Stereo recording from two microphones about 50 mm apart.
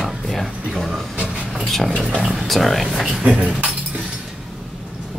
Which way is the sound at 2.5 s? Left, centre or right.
Centre.